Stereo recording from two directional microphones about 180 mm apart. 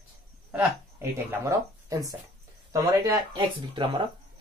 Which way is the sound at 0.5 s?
10° right (ahead or behind).